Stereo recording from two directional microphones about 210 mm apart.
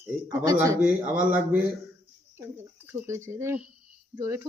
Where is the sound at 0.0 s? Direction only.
15° right (ahead or behind).